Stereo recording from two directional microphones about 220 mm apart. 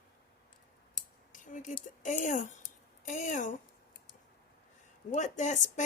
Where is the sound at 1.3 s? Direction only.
35° left (ahead or behind).